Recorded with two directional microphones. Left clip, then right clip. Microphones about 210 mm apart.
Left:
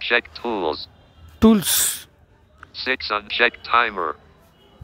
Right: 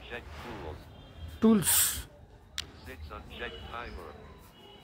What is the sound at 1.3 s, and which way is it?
Speech, 40° left (ahead or behind).